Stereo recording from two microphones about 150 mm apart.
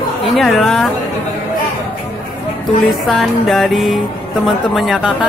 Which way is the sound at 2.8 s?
Centre (ahead or behind).